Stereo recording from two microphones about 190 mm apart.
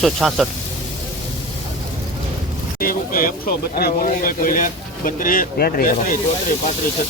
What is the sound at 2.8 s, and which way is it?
Speech, 50° left (ahead or behind).